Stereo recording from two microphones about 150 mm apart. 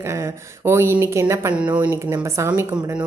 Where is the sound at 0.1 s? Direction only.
15° right (ahead or behind).